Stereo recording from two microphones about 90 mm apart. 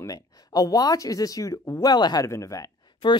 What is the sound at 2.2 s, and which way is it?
Speech, 35° left (ahead or behind).